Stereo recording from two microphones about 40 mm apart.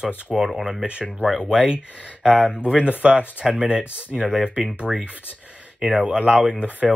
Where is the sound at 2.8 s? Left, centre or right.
Right.